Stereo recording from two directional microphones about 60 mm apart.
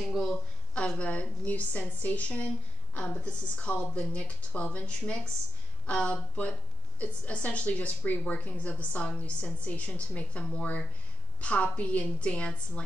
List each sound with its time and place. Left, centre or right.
0.0 s speech: centre
0.7 s a woman's voice: centre